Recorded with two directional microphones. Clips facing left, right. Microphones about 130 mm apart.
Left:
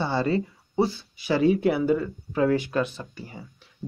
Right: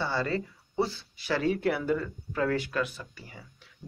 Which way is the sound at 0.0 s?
20° left (ahead or behind).